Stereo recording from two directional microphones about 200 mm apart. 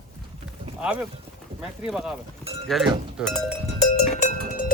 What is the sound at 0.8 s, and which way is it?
Speech, 5° right (ahead or behind).